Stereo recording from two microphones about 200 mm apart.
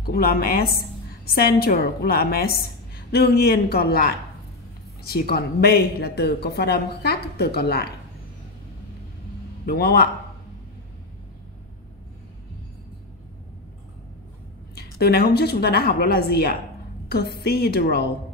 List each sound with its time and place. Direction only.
0.0 s speech: 50° left (ahead or behind)
5.1 s speech: 50° left (ahead or behind)
9.7 s speech: 50° left (ahead or behind)
14.8 s speech: 50° left (ahead or behind)